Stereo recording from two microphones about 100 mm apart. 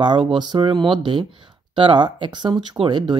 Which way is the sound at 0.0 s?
55° right (ahead or behind).